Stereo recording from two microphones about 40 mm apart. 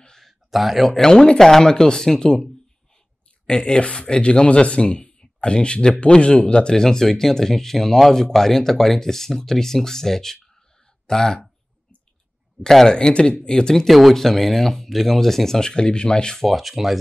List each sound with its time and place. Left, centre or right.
0.2 s a sound: centre
1.0 s speech: centre
3.4 s speech: left
12.6 s speech: centre
12.9 s speech: left
13.8 s speech: centre
15.7 s speech: left
16.3 s speech: centre